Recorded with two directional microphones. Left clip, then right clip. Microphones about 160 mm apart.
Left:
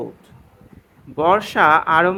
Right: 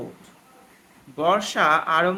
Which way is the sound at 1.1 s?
40° left (ahead or behind).